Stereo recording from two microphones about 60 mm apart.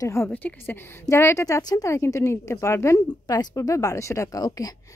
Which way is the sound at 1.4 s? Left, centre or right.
Left.